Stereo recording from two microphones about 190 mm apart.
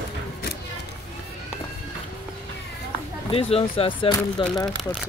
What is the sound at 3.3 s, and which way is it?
Speech, 30° left (ahead or behind).